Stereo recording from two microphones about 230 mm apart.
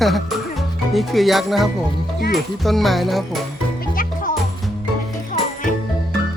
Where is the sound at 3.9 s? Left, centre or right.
Left.